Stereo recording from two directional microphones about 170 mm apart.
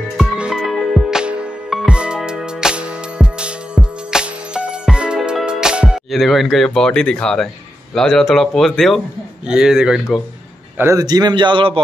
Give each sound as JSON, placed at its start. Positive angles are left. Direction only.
{"t": 0.2, "sound": "music", "side_deg": -5}
{"t": 7.9, "sound": "speech", "side_deg": 5}
{"t": 10.8, "sound": "a man's voice", "side_deg": -20}